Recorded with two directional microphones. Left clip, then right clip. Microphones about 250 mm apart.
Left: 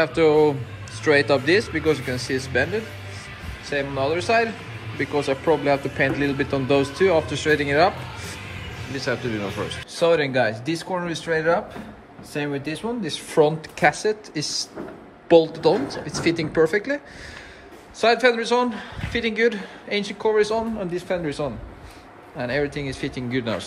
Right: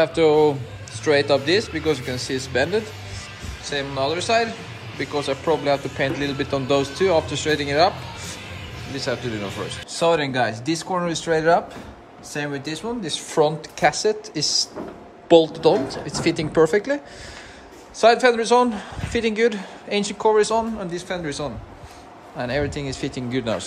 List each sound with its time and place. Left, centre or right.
0.0 s speech: centre
18.0 s speech: centre